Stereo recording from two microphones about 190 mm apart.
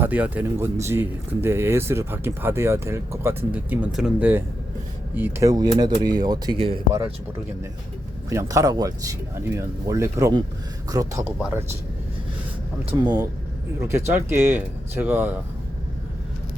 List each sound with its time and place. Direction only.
0.0 s speech: 10° right (ahead or behind); by 6.7 s 25° right (ahead or behind)
8.3 s speech: 15° right (ahead or behind)
12.8 s speech: 25° right (ahead or behind); by 15.4 s 10° right (ahead or behind)